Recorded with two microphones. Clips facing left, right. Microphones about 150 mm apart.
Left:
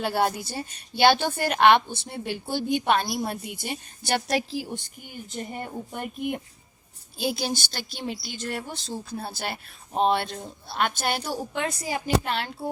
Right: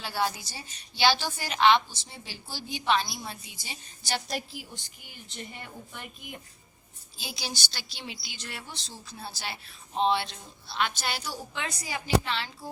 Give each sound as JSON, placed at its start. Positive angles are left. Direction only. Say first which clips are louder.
{"t": 0.0, "sound": "a woman's voice", "louder": "left 6 dB", "side_deg": 55}
{"t": 4.9, "sound": "a woman's voice", "louder": "left 8 dB", "side_deg": 45}